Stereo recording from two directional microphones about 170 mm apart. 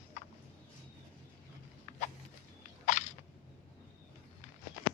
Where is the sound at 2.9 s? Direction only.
45° left (ahead or behind).